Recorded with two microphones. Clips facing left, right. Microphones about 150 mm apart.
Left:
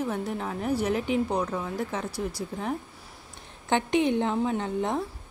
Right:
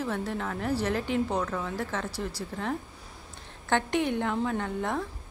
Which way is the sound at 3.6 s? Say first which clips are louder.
Left 3 dB; 20° left (ahead or behind).